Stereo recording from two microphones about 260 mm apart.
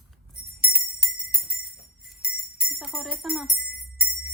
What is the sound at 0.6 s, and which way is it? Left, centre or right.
Jingle bell, left.